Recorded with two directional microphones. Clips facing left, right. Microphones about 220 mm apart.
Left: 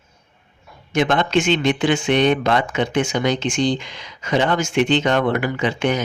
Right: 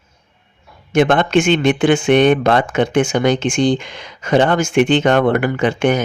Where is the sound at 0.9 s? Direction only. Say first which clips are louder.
Right 5 dB; 55° right (ahead or behind).